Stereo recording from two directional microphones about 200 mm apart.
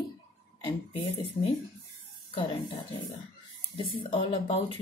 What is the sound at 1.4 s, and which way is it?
A woman's voice, 25° left (ahead or behind).